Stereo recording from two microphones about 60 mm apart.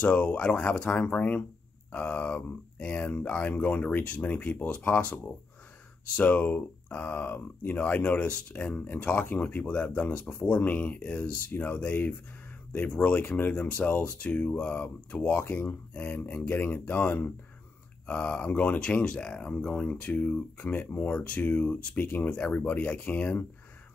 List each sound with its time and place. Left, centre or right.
0.0 s speech: left